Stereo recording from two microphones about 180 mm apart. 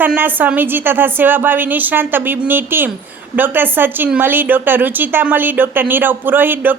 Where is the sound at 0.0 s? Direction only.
10° right (ahead or behind).